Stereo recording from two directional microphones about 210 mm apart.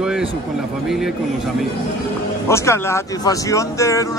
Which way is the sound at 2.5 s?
15° left (ahead or behind).